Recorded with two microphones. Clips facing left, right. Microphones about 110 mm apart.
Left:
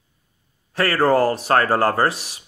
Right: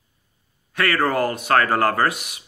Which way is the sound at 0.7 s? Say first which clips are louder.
Left 4 dB; 30° left (ahead or behind).